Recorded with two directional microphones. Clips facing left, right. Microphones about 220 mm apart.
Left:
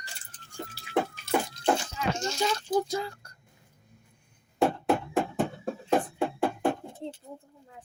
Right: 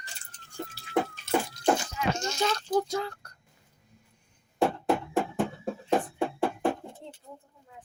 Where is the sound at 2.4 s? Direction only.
10° left (ahead or behind).